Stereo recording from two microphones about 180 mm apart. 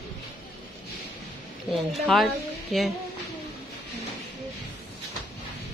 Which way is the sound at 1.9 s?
Centre (ahead or behind).